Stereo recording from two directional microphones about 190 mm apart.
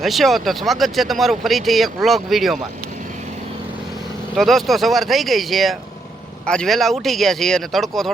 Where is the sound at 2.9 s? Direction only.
45° right (ahead or behind).